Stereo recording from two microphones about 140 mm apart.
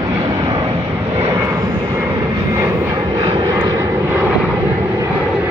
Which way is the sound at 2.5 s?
20° right (ahead or behind).